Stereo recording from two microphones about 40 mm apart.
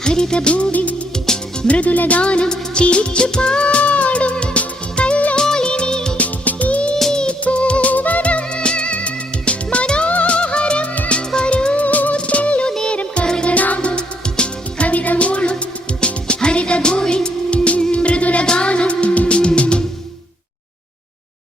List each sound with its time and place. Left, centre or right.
0.0 s music: centre
5.4 s music of bollywood: centre
6.1 s music: left
7.1 s music: left
12.7 s music: centre
13.5 s music: left